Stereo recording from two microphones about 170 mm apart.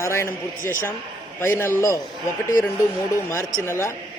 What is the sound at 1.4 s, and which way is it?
Speech, 15° left (ahead or behind).